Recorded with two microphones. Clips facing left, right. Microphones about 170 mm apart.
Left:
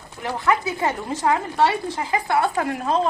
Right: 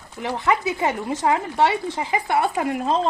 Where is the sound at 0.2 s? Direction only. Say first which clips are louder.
Even; 20° right (ahead or behind).